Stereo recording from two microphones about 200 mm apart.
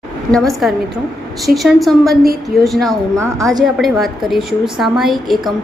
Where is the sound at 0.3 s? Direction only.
Centre (ahead or behind).